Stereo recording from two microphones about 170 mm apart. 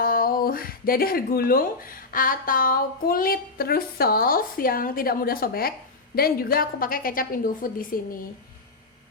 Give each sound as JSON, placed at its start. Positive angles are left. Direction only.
{"t": 0.0, "sound": "speech", "side_deg": 60}